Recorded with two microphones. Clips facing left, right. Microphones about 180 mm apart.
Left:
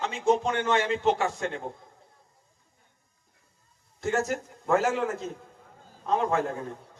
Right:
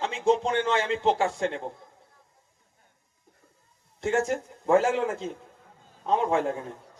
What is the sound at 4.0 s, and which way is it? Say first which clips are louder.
A man's voice: right 2 dB; 30° right (ahead or behind).